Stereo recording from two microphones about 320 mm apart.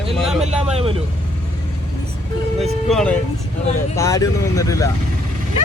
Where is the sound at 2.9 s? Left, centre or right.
Centre.